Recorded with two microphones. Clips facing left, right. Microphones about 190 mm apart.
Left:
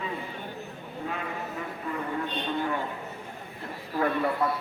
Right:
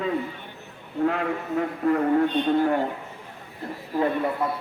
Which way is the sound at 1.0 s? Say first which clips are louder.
Right 10 dB; 70° right (ahead or behind).